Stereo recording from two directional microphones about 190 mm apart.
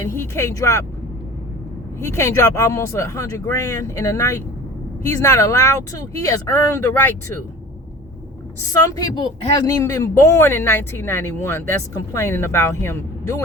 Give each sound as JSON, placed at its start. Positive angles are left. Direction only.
{"t": 0.0, "sound": "speech", "side_deg": 15}
{"t": 2.0, "sound": "speech", "side_deg": 15}
{"t": 9.0, "sound": "speech", "side_deg": 20}